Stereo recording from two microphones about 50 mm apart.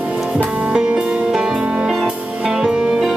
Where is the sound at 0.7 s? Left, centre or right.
Centre.